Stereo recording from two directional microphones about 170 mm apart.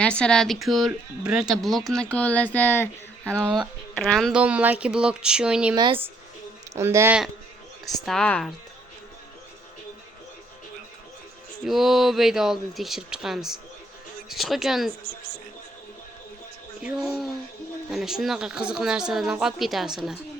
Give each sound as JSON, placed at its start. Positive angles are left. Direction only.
{"t": 0.0, "sound": "speech", "side_deg": 5}
{"t": 3.5, "sound": "speech", "side_deg": 0}
{"t": 5.7, "sound": "speech", "side_deg": -25}
{"t": 6.7, "sound": "speech", "side_deg": -15}
{"t": 7.9, "sound": "speech", "side_deg": 0}
{"t": 11.6, "sound": "speech", "side_deg": 0}
{"t": 17.9, "sound": "speech", "side_deg": 0}